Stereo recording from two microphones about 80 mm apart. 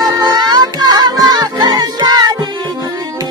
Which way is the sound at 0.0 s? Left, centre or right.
Right.